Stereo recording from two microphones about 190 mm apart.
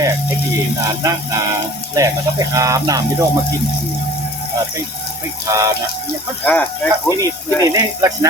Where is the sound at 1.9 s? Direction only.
15° right (ahead or behind).